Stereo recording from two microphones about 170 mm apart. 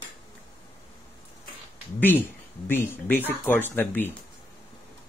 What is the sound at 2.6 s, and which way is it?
Speech, 10° left (ahead or behind).